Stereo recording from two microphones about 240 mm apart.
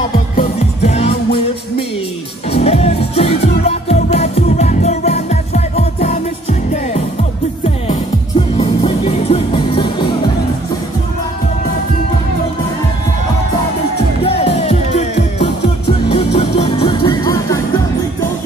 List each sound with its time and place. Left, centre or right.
0.4 s music: left
2.5 s music: left
7.6 s music: left
14.2 s music: left